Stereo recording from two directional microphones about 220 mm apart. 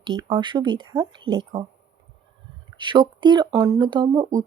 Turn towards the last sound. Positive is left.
turn(degrees=-20)  # may be behind; listen again after turning